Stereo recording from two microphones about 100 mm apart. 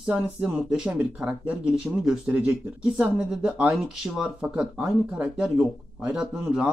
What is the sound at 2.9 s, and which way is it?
Speech, 10° right (ahead or behind).